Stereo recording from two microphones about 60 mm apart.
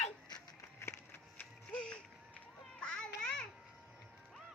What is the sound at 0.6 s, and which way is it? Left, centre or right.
Music, left.